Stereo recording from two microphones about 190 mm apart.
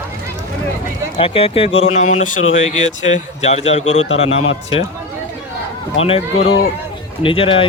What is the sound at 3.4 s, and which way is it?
Speech, 35° left (ahead or behind).